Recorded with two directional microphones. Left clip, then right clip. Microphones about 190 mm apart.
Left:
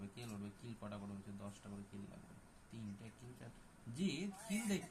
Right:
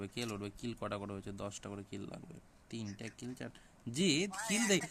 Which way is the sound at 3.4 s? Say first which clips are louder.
Right 11 dB; 65° right (ahead or behind).